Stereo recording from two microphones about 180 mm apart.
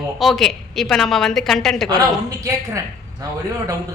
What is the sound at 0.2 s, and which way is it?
A woman's voice, centre (ahead or behind).